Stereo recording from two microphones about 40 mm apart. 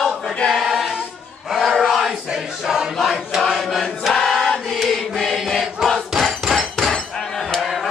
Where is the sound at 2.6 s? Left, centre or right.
Centre.